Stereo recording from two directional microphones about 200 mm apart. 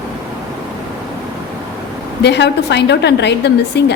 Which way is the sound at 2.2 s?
60° left (ahead or behind).